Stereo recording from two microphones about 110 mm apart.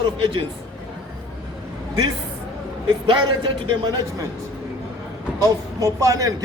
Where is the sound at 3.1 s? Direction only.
40° right (ahead or behind).